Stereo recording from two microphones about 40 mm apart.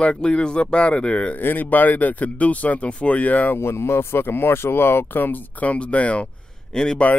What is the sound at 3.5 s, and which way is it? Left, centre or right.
Speech, left.